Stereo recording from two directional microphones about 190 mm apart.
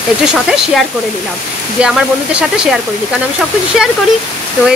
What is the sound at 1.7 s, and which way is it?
Speech, 5° right (ahead or behind).